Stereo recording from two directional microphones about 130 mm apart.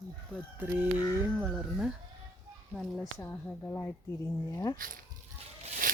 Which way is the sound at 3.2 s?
15° left (ahead or behind).